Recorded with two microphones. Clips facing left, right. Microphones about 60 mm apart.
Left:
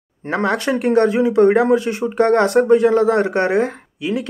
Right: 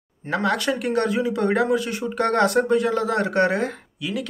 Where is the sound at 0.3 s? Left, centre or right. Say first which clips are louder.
Left 4 dB; left.